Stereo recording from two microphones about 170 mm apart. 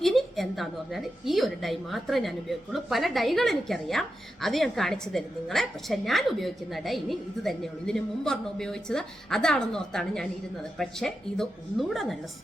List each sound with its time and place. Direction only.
0.0 s a woman's voice: centre (ahead or behind)